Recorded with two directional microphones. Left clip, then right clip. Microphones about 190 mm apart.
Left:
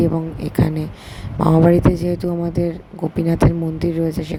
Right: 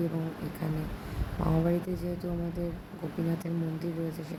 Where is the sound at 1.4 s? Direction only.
40° left (ahead or behind).